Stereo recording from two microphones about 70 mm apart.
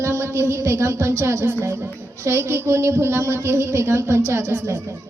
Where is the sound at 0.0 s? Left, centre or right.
Right.